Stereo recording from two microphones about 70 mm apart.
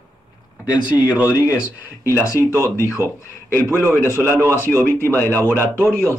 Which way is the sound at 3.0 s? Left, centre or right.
Right.